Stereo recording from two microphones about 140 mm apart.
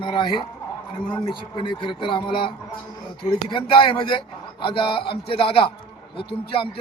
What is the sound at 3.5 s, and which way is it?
A man's voice, 35° left (ahead or behind).